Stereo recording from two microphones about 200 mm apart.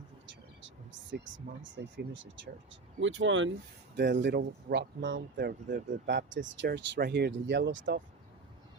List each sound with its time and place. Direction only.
1.1 s speech: 70° right (ahead or behind)
3.9 s speech: 60° right (ahead or behind)